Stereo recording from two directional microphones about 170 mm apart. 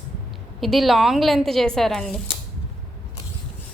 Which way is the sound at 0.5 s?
Centre (ahead or behind).